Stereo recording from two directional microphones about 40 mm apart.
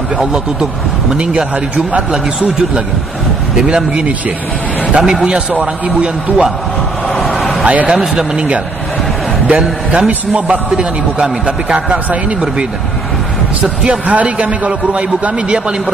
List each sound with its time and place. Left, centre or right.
0.2 s speech: centre
1.1 s a man's voice: right
3.5 s a man's voice: right
7.2 s a sound: centre
7.6 s a man's voice: right
7.9 s a man's voice: centre
9.8 s a man's voice: right
11.7 s a man's voice: right